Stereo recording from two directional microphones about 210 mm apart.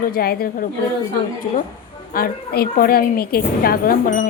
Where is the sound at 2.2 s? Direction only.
45° left (ahead or behind).